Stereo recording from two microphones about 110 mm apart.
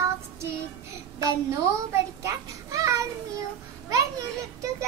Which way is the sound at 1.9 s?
30° right (ahead or behind).